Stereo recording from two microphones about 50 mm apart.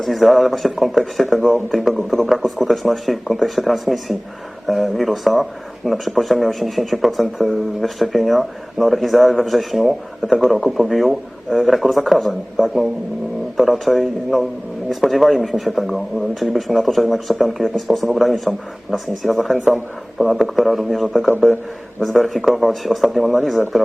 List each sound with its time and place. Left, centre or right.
0.0 s speech: centre